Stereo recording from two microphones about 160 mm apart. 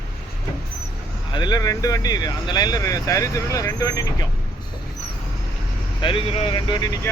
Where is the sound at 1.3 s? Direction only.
25° left (ahead or behind).